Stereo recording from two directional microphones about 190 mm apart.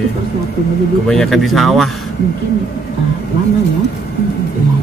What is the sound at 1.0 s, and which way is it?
Speech, centre (ahead or behind).